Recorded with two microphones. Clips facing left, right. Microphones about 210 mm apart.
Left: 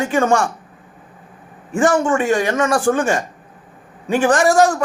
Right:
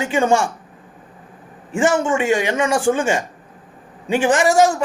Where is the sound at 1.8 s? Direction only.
25° right (ahead or behind).